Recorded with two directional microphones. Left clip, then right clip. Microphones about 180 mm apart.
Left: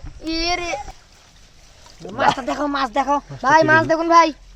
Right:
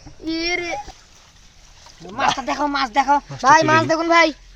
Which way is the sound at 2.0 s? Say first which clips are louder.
Left 1 dB; 25° left (ahead or behind).